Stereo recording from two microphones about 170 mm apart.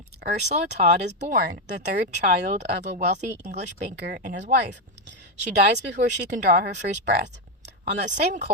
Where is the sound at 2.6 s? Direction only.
90° right.